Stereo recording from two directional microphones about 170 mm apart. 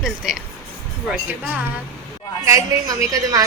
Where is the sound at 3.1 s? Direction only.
20° right (ahead or behind).